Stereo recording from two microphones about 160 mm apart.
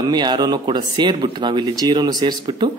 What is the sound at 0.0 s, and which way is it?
Speech, 25° right (ahead or behind).